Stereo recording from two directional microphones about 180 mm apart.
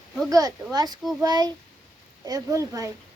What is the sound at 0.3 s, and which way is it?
Speech, 20° right (ahead or behind).